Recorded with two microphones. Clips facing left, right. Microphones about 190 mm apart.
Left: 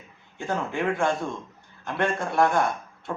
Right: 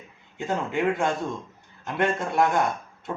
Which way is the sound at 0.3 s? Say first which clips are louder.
Right 2 dB; 20° right (ahead or behind).